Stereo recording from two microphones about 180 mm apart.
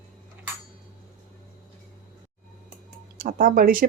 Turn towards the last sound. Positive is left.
turn(degrees=-50)  # may be behind; listen again after turning